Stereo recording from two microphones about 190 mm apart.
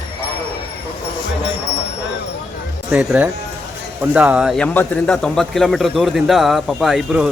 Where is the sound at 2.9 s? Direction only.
5° right (ahead or behind).